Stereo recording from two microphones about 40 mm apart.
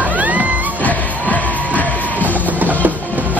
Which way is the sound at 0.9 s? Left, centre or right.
Left.